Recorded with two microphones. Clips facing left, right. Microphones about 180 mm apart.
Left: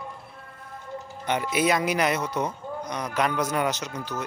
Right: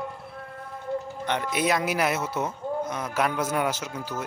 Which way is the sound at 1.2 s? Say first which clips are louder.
Left 3 dB; 5° left (ahead or behind).